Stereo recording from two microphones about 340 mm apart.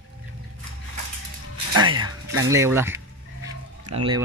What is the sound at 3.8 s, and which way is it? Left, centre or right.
Music, right.